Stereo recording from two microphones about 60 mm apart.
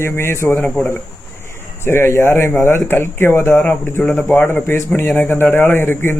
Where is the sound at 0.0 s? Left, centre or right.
Left.